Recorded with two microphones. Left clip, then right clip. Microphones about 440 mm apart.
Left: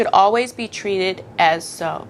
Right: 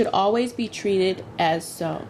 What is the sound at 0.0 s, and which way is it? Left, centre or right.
A woman's voice, left.